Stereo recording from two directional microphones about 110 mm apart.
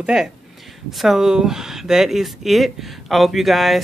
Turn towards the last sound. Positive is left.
turn(degrees=0)  # may be behind; listen again after turning